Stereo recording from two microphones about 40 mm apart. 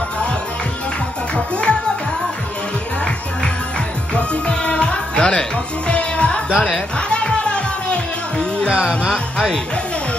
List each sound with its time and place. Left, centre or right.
1.3 s music: left
4.1 s music: left
8.6 s music: right
9.1 s music: centre